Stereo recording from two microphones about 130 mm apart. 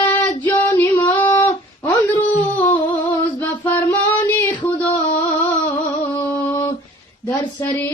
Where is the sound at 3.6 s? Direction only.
15° left (ahead or behind).